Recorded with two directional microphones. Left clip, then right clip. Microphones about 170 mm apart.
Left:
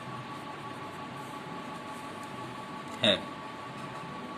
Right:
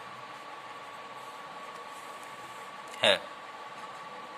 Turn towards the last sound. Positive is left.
turn(degrees=-45)  # may be behind; listen again after turning